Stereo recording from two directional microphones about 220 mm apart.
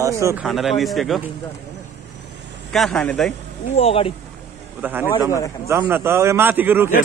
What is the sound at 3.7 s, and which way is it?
Speech, 25° left (ahead or behind).